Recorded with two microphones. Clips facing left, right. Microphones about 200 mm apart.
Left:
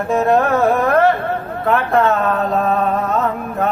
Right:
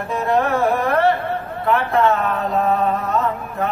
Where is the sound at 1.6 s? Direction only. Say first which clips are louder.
Left 2 dB; 50° left (ahead or behind).